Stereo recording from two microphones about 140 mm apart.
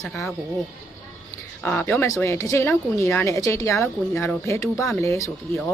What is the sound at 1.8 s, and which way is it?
Speech, 20° left (ahead or behind).